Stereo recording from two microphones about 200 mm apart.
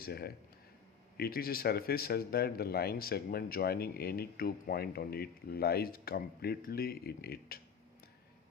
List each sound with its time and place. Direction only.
0.0 s a man's voice: 50° left (ahead or behind)